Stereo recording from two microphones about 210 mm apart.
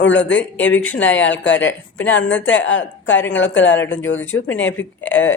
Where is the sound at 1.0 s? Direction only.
60° left (ahead or behind).